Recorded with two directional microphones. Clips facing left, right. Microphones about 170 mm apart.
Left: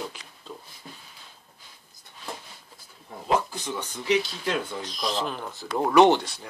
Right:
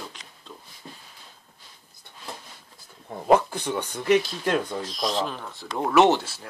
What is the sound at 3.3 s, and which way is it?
Speech, 60° right (ahead or behind).